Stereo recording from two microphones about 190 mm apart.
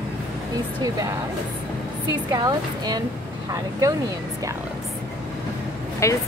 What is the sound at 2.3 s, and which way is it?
Speech, 20° right (ahead or behind).